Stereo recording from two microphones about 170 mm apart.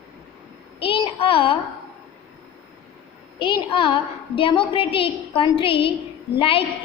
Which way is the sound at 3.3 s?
30° left (ahead or behind).